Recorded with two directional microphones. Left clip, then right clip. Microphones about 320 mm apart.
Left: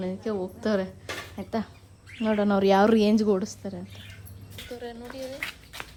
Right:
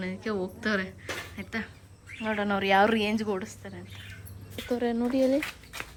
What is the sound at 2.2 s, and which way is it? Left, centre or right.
Speech, right.